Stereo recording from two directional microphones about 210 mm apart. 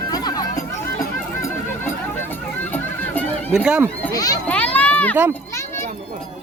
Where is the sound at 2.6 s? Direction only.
10° left (ahead or behind).